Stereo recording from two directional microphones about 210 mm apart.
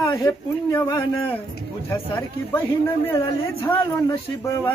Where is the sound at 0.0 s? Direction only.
20° left (ahead or behind).